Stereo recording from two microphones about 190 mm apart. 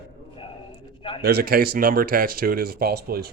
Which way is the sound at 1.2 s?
55° right (ahead or behind).